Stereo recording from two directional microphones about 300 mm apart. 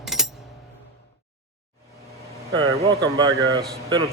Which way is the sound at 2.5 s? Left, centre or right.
Centre.